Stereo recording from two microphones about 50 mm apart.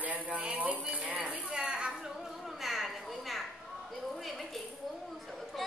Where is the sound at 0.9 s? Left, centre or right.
Right.